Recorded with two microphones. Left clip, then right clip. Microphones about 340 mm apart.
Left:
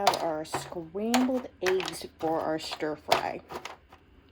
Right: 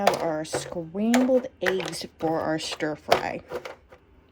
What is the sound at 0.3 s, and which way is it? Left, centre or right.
Speech, right.